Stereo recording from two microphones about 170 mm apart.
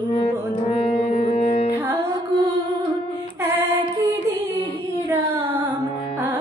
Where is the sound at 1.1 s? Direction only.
45° left (ahead or behind).